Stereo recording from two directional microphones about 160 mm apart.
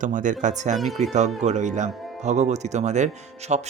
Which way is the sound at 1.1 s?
45° right (ahead or behind).